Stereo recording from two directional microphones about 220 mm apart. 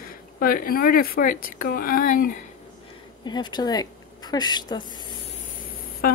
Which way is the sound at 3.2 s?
20° left (ahead or behind).